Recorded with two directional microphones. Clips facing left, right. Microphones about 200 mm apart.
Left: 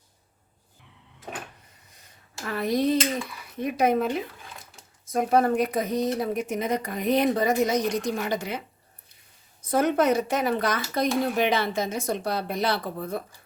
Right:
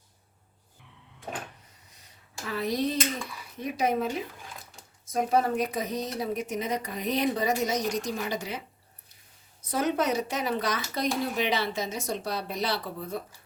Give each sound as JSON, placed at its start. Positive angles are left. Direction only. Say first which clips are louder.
{"t": 2.4, "sound": "speech", "louder": "left 4 dB", "side_deg": 55}
{"t": 5.1, "sound": "speech", "louder": "left 4 dB", "side_deg": 55}